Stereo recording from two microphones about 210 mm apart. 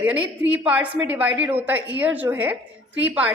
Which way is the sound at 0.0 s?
5° right (ahead or behind).